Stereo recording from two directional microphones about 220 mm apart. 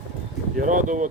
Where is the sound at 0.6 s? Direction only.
35° right (ahead or behind).